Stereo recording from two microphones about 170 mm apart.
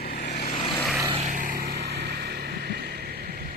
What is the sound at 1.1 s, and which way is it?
Vehicle, 40° right (ahead or behind).